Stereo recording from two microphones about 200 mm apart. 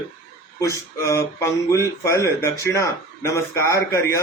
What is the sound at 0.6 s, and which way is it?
Speech, 15° left (ahead or behind).